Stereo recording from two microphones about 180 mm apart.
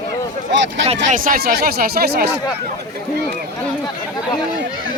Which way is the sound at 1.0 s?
50° right (ahead or behind).